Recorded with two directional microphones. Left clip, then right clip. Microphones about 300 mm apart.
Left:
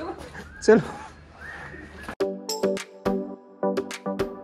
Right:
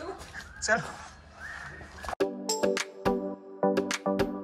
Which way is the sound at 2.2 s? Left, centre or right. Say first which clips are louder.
Left 3 dB; centre.